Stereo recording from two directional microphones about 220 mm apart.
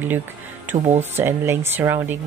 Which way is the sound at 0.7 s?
30° right (ahead or behind).